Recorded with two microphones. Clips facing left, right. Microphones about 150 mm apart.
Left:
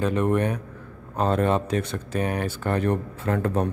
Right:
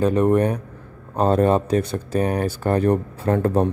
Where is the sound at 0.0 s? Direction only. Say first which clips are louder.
Right 5 dB; 35° right (ahead or behind).